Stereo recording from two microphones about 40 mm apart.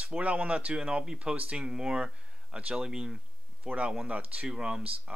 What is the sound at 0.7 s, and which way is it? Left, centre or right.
Speech, right.